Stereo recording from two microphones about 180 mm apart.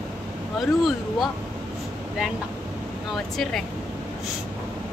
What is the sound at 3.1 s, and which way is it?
Speech, centre (ahead or behind).